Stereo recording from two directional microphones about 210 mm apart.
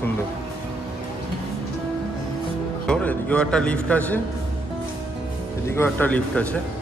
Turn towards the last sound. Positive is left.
turn(degrees=5)  # may be behind; listen again after turning